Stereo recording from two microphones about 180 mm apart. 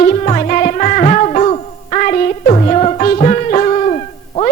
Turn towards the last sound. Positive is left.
turn(degrees=35)  # may be behind; listen again after turning